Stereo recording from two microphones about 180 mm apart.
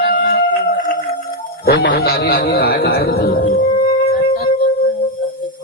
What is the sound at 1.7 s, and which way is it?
A man's voice, 65° left (ahead or behind).